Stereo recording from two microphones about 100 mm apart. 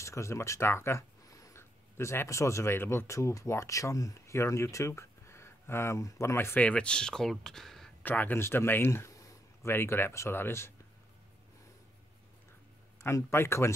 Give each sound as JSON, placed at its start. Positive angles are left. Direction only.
{"t": 0.0, "sound": "speech", "side_deg": 30}
{"t": 8.0, "sound": "speech", "side_deg": 20}
{"t": 9.7, "sound": "speech", "side_deg": 20}
{"t": 13.0, "sound": "speech", "side_deg": 25}